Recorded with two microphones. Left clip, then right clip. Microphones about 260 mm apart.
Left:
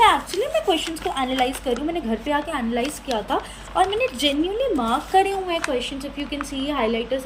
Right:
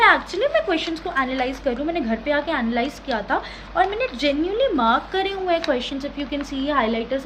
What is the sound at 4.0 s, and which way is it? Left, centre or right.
Speech, right.